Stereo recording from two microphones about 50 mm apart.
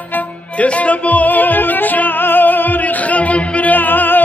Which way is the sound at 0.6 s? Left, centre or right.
Left.